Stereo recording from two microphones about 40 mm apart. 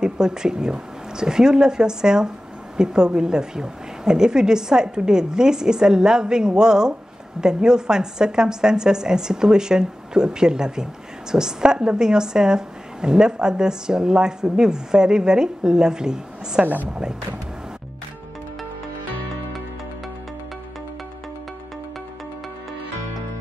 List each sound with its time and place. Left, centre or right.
0.0 s a woman's voice: centre